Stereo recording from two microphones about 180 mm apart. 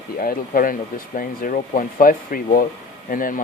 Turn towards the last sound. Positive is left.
turn(degrees=50)  # may be behind; listen again after turning